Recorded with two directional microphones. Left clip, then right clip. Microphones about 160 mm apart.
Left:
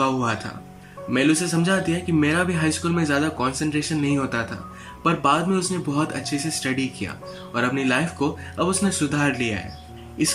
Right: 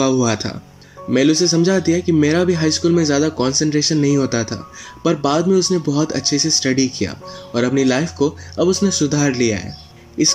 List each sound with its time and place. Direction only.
0.0 s speech: 30° right (ahead or behind)
3.9 s speech: 40° right (ahead or behind)